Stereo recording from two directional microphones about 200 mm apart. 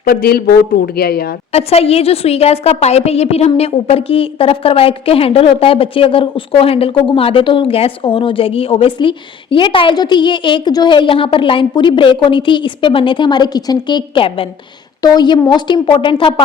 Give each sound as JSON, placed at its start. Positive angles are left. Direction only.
{"t": 0.0, "sound": "speech", "side_deg": 50}
{"t": 1.5, "sound": "a woman's voice", "side_deg": 30}